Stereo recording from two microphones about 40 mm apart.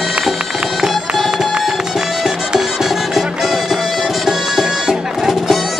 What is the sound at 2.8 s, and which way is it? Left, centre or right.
Music, centre.